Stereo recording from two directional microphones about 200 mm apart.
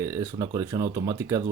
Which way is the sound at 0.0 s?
15° right (ahead or behind).